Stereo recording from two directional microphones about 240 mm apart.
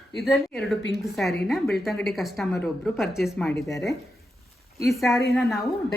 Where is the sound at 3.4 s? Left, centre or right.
Centre.